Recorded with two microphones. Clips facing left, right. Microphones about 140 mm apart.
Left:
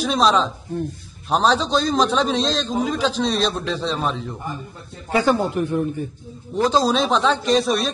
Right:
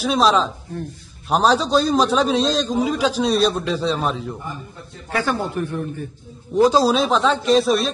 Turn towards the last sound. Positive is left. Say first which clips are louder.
# right 2 dB
turn(degrees=0)  # may be behind; listen again after turning